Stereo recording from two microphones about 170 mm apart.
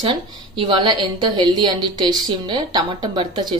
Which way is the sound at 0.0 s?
30° right (ahead or behind).